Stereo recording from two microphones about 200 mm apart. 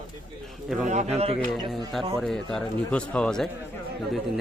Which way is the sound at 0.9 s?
35° right (ahead or behind).